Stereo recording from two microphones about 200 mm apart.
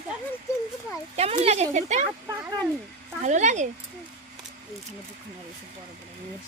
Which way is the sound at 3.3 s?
35° right (ahead or behind).